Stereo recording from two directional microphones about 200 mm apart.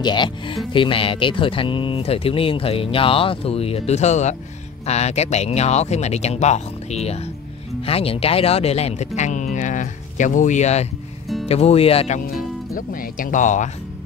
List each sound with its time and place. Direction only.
0.0 s speech: 20° left (ahead or behind)
12.4 s speech: 45° left (ahead or behind)